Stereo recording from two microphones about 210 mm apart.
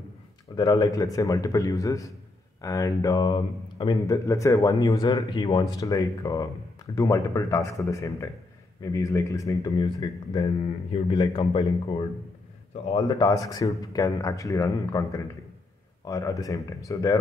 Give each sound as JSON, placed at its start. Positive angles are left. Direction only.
{"t": 0.6, "sound": "a man's voice", "side_deg": 15}
{"t": 12.9, "sound": "speech", "side_deg": 20}